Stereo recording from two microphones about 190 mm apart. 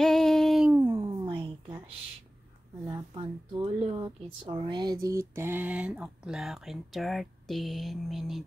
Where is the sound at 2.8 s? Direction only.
25° right (ahead or behind).